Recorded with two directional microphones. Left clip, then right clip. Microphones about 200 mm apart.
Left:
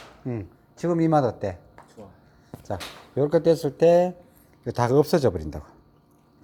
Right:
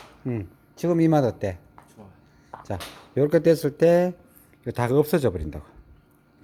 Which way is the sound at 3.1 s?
30° right (ahead or behind).